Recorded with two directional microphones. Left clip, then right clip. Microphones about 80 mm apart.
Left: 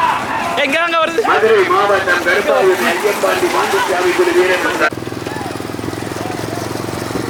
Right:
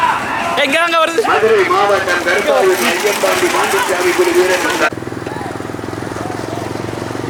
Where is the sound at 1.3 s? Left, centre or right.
Centre.